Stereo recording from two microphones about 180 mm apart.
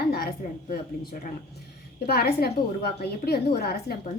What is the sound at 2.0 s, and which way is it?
A woman's voice, 60° left (ahead or behind).